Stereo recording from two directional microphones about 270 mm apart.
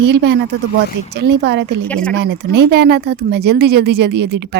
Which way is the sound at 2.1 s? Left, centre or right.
Right.